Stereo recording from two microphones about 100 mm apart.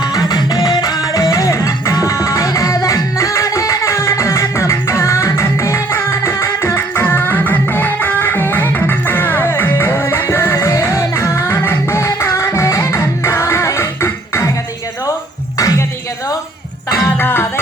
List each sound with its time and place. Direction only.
0.0 s music: 40° left (ahead or behind)
15.5 s a sound: 35° left (ahead or behind)
17.2 s music: 20° left (ahead or behind)